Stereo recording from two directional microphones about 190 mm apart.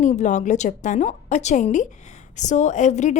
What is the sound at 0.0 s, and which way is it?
A woman's voice, 40° left (ahead or behind).